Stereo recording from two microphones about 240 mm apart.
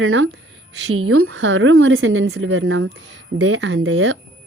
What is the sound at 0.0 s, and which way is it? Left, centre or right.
A woman's voice, right.